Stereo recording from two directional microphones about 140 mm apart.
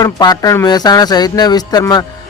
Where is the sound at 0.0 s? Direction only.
25° left (ahead or behind).